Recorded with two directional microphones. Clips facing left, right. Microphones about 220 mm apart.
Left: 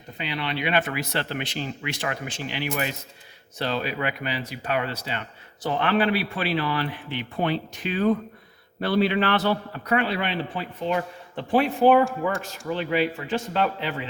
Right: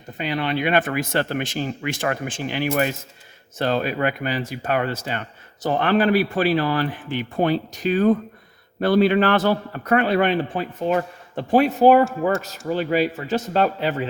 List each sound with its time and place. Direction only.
0.2 s a man's voice: 45° right (ahead or behind)